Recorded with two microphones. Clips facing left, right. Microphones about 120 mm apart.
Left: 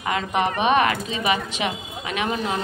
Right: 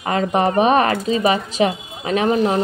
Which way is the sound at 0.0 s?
40° right (ahead or behind).